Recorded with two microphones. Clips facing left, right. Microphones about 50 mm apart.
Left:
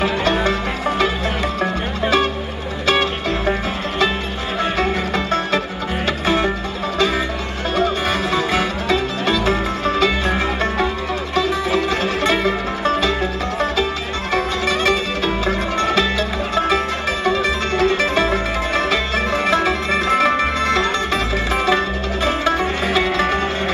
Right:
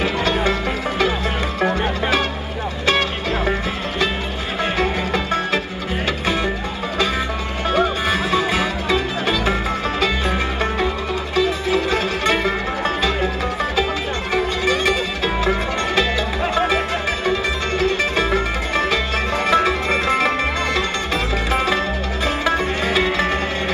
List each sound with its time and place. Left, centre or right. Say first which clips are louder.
4.7 s music: left 1 dB; centre
7.7 s music: even; centre
11.9 s music: left 1 dB; right
14.3 s music: even; centre
19.5 s music: right 3 dB; right
22.2 s music: left 2 dB; centre